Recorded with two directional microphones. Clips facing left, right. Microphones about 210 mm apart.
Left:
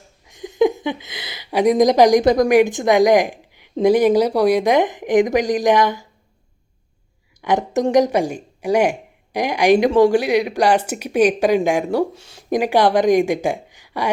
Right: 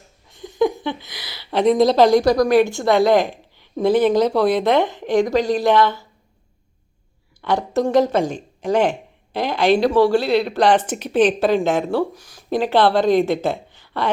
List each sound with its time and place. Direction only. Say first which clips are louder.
0.3 s speech: left 2 dB; 20° left (ahead or behind)
7.4 s speech: left 1 dB; 15° left (ahead or behind)
12.1 s speech: left 1 dB; 25° left (ahead or behind)
12.5 s speech: left 1 dB; 15° left (ahead or behind)